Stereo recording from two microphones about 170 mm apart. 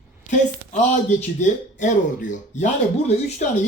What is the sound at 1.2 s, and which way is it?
Speech, 45° left (ahead or behind).